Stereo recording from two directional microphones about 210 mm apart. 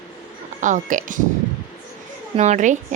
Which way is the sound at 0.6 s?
40° right (ahead or behind).